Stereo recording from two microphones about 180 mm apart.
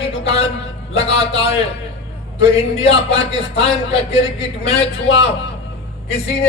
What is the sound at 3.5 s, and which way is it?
Speech, 35° left (ahead or behind).